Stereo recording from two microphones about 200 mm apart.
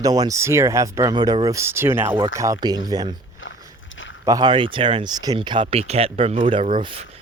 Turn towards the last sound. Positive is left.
turn(degrees=-25)  # may be behind; listen again after turning